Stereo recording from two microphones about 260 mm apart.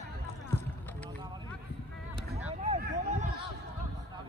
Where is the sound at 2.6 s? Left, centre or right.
Right.